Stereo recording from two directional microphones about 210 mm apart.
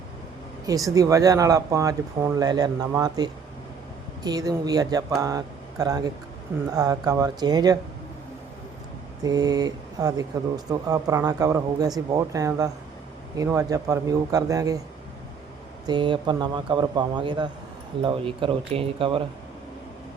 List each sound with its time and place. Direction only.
0.7 s speech: 15° right (ahead or behind)
9.2 s speech: 20° right (ahead or behind)
15.9 s a man's voice: 25° right (ahead or behind)